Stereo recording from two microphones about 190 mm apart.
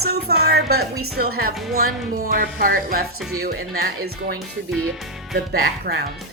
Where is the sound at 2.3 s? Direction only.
50° right (ahead or behind).